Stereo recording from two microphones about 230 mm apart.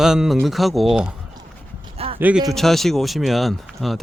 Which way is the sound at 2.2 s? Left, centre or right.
Centre.